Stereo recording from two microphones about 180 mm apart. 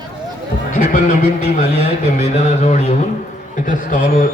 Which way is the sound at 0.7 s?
45° left (ahead or behind).